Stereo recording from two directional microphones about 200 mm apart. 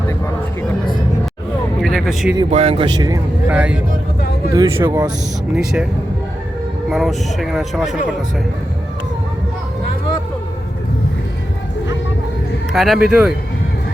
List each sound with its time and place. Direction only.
1.8 s a man's voice: centre (ahead or behind)
2.5 s speech: 30° right (ahead or behind)
3.4 s speech: 5° right (ahead or behind)
4.5 s speech: 15° right (ahead or behind)
5.5 s speech: 5° right (ahead or behind)
6.9 s speech: centre (ahead or behind)
12.7 s speech: centre (ahead or behind)